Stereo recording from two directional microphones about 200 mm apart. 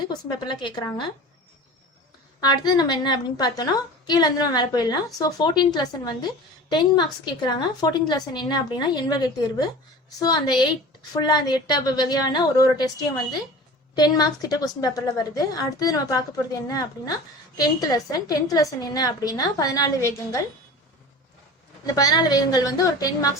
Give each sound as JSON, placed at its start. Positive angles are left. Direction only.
{"t": 0.1, "sound": "a woman's voice", "side_deg": 20}
{"t": 2.4, "sound": "a woman's voice", "side_deg": 20}
{"t": 13.9, "sound": "a woman's voice", "side_deg": 20}
{"t": 21.9, "sound": "a woman's voice", "side_deg": 20}